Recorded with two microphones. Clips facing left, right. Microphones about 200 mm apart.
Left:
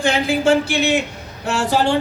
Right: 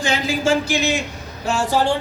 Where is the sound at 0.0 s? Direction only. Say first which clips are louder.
Left 3 dB; 55° left (ahead or behind).